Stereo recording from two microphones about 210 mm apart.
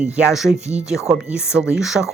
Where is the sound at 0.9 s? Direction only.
Centre (ahead or behind).